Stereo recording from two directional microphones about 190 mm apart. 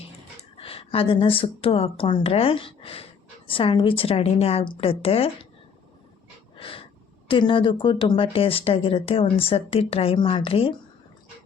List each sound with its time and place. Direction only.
0.5 s speech: 30° left (ahead or behind)
6.6 s wheeze: 30° left (ahead or behind)
7.3 s speech: 25° left (ahead or behind)